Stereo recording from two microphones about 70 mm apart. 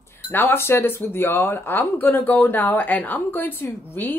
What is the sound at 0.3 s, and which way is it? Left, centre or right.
Speech, left.